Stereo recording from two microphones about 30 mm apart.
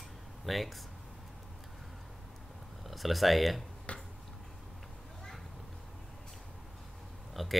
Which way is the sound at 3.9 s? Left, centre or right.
Left.